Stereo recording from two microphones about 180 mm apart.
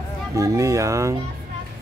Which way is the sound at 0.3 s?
20° right (ahead or behind).